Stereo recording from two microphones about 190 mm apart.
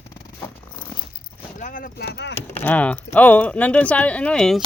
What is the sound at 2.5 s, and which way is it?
Speech, 10° left (ahead or behind).